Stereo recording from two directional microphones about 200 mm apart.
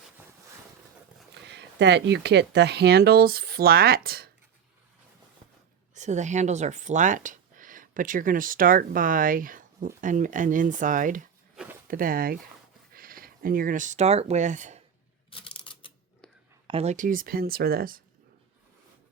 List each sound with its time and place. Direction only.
1.3 s speech: 60° right (ahead or behind)
5.9 s speech: 35° right (ahead or behind)
11.5 s zipper: 5° right (ahead or behind)
11.9 s speech: 45° right (ahead or behind)
15.3 s a sound: 25° left (ahead or behind)
16.6 s speech: 30° right (ahead or behind); by 18.0 s 45° right (ahead or behind)